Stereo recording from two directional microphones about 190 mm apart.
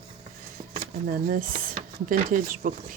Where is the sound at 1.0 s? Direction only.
50° right (ahead or behind).